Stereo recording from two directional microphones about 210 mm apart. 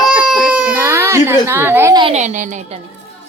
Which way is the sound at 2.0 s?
35° right (ahead or behind).